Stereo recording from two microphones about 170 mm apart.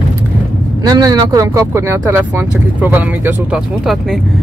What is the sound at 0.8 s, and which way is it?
Speech, 25° right (ahead or behind).